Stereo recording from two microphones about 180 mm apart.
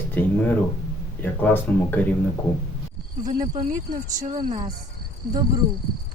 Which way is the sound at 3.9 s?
45° right (ahead or behind).